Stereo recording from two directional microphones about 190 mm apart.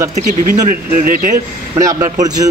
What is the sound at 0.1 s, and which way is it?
Speech, 40° right (ahead or behind).